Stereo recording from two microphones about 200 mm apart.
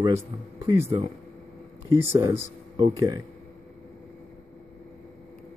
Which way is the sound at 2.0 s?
15° right (ahead or behind).